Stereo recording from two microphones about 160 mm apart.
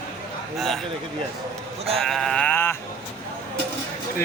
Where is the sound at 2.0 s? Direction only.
Centre (ahead or behind).